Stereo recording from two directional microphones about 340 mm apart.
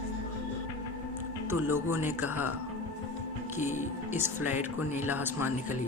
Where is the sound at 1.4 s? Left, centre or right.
Centre.